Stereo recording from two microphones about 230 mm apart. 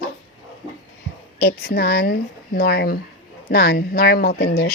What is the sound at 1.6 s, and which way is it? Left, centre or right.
A woman's voice, left.